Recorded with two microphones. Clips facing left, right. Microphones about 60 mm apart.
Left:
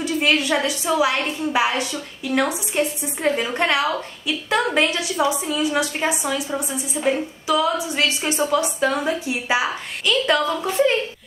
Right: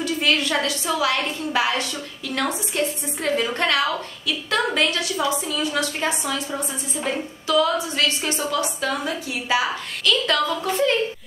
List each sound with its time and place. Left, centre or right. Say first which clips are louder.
0.0 s a woman's voice: left 2 dB; left
7.4 s a woman's voice: even; centre